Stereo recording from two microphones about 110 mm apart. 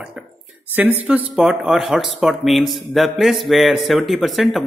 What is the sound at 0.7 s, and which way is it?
A man's voice, 20° right (ahead or behind).